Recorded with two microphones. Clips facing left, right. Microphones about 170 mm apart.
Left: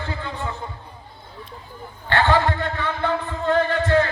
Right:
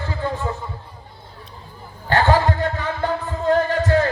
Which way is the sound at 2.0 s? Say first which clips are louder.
Right 2 dB; 40° right (ahead or behind).